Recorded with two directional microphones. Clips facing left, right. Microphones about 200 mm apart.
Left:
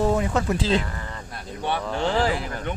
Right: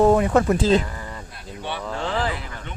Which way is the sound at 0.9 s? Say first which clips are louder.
Even; 10° right (ahead or behind).